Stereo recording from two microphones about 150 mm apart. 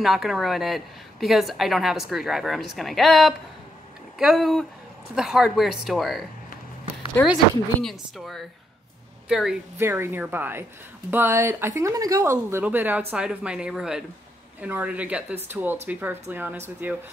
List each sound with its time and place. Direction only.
0.0 s a woman's voice: centre (ahead or behind)
7.2 s speech: 15° left (ahead or behind)
7.8 s a woman's voice: centre (ahead or behind)
9.8 s speech: 15° right (ahead or behind)